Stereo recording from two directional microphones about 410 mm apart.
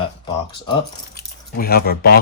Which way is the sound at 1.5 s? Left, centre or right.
Left.